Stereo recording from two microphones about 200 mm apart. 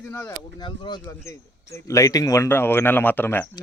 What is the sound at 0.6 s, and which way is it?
Speech, 20° left (ahead or behind).